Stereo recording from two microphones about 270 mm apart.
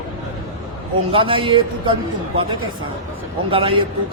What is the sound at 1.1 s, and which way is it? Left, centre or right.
Speech, centre.